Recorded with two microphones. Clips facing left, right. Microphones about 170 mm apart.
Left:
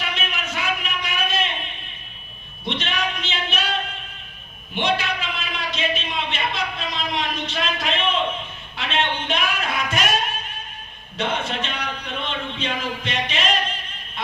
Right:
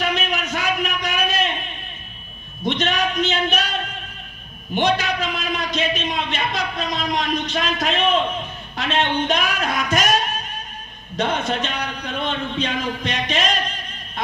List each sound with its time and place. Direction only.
0.0 s a sound: 40° right (ahead or behind)
2.6 s a man's voice: 40° right (ahead or behind)
4.7 s a man's voice: 40° right (ahead or behind)
11.2 s a man's voice: 40° right (ahead or behind)